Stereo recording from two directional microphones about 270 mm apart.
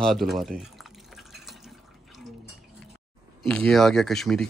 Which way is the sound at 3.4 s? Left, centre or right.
Centre.